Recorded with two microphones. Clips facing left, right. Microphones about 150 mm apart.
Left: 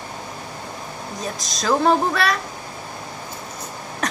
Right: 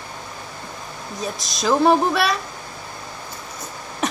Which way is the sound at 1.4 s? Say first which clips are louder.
Left 1 dB; 20° left (ahead or behind).